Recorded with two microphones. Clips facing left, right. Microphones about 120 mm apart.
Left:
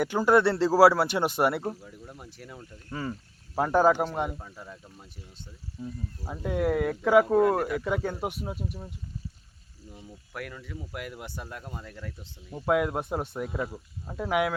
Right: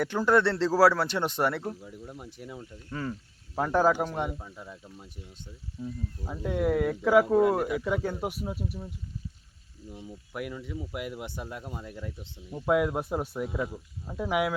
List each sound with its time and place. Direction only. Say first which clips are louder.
0.0 s speech: left 2 dB; 5° left (ahead or behind)
1.9 s speech: right 3 dB; 5° right (ahead or behind)
2.9 s speech: even; 5° left (ahead or behind)
9.9 s speech: right 3 dB; 10° right (ahead or behind)
12.5 s speech: even; centre (ahead or behind)